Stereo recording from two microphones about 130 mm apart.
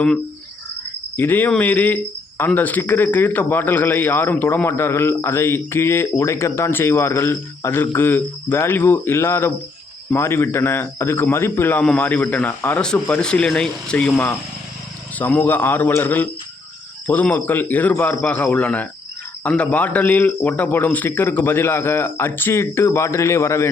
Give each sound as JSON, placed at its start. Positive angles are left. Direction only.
{"t": 1.1, "sound": "a man's voice", "side_deg": 15}